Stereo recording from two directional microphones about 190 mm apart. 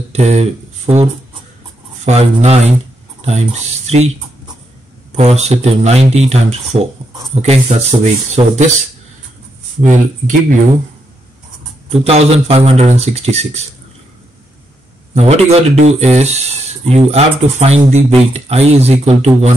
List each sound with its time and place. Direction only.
0.1 s speech: 35° right (ahead or behind)
2.0 s speech: 35° right (ahead or behind)
5.1 s speech: 35° right (ahead or behind)
11.9 s speech: 30° right (ahead or behind)
15.1 s speech: 35° right (ahead or behind)